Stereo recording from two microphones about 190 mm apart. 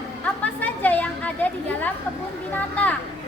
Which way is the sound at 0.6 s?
10° left (ahead or behind).